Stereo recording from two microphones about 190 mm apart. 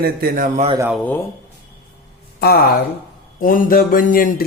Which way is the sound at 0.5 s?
35° right (ahead or behind).